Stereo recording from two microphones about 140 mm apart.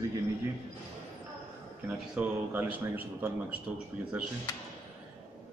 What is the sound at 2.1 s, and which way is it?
A man's voice, 10° right (ahead or behind).